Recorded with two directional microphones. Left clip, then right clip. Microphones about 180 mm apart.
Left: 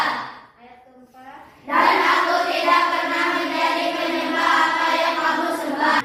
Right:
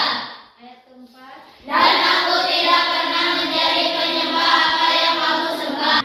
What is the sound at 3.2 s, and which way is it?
Choir, centre (ahead or behind).